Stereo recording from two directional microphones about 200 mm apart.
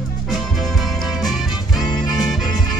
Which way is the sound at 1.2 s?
Centre (ahead or behind).